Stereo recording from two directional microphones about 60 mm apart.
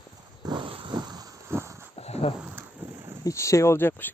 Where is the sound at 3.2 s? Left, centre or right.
Left.